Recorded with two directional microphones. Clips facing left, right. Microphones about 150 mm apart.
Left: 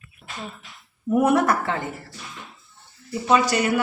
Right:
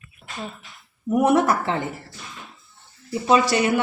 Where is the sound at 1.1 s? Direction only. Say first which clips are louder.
Right 1 dB; 25° right (ahead or behind).